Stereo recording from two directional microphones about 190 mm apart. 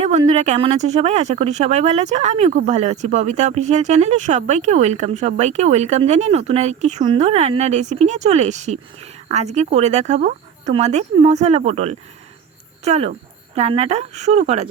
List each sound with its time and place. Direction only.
0.3 s speech: 35° right (ahead or behind)